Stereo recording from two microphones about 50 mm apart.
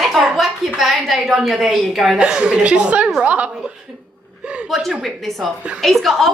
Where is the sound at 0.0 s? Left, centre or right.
Centre; by 3.7 s right.